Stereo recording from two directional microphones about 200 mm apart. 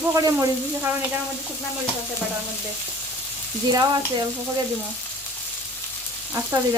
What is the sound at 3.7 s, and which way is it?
Speech, 20° right (ahead or behind).